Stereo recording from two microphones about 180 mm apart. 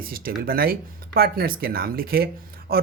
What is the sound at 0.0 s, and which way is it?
Speech, 55° right (ahead or behind).